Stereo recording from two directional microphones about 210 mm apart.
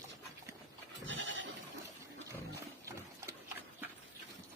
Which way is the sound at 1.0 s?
65° right (ahead or behind).